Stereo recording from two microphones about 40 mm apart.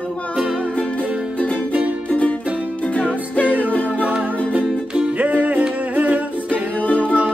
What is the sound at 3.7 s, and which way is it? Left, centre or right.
Music, left.